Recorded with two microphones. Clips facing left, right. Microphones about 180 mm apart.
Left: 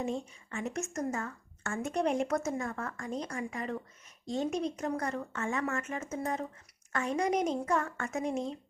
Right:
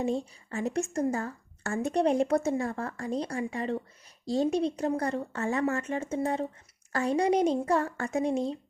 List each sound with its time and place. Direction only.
0.0 s a woman's voice: 35° right (ahead or behind)